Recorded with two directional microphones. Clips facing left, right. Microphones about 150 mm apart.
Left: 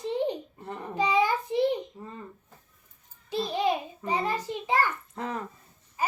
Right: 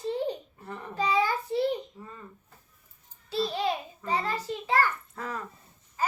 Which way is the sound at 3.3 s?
15° left (ahead or behind).